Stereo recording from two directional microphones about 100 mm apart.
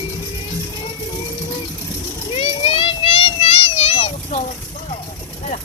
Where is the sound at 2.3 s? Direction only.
65° left (ahead or behind); by 4.4 s 80° left.